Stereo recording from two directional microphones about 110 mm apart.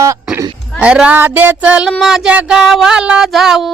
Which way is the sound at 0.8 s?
10° right (ahead or behind).